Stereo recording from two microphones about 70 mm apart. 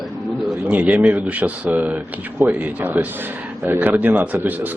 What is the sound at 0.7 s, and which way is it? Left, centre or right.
Speech, right.